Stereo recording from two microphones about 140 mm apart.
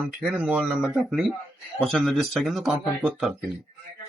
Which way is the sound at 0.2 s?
10° right (ahead or behind).